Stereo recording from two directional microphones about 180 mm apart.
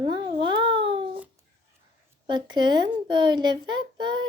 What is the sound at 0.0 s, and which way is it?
Babbling, 25° right (ahead or behind).